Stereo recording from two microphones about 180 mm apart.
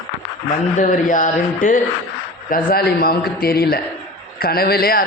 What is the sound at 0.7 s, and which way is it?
A man's voice, 45° left (ahead or behind).